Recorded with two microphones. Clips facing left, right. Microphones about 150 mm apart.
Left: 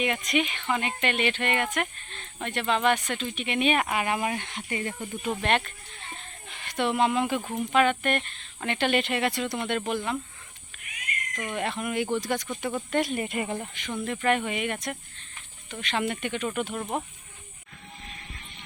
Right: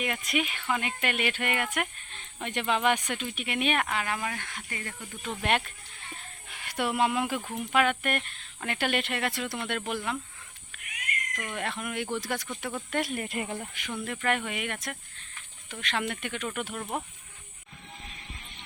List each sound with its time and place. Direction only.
0.0 s speech: 5° right (ahead or behind)
3.8 s speech: 15° left (ahead or behind)
5.4 s speech: 5° right (ahead or behind)
11.3 s speech: centre (ahead or behind)